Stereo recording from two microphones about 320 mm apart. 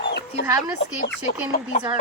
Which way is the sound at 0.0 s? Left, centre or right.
Left.